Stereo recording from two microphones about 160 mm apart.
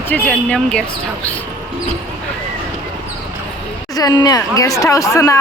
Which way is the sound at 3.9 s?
25° left (ahead or behind).